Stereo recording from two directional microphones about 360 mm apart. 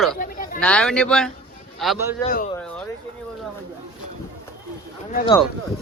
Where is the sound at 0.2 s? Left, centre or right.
Left.